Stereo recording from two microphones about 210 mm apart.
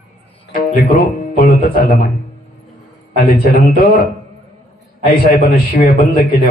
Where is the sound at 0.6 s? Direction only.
40° left (ahead or behind).